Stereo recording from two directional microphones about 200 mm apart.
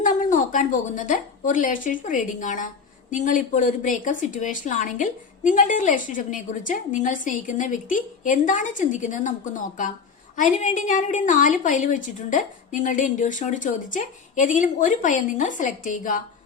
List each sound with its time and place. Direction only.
0.0 s a woman's voice: 40° left (ahead or behind)